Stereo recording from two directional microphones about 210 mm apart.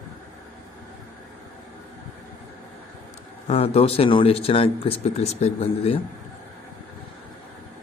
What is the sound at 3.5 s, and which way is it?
Speech, 25° left (ahead or behind).